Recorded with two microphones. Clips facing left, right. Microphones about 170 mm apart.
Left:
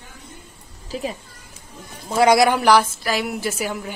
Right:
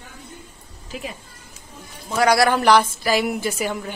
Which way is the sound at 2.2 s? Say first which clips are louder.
Left 2 dB; 20° left (ahead or behind).